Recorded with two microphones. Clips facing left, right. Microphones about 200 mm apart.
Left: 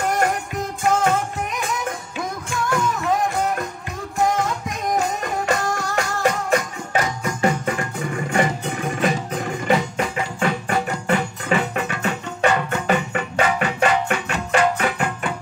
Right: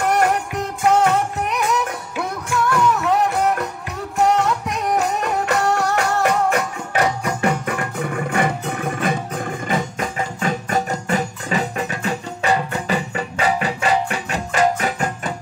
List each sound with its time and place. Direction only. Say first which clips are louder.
0.0 s music: right 3 dB; 65° right (ahead or behind); by 15.3 s 40° right (ahead or behind)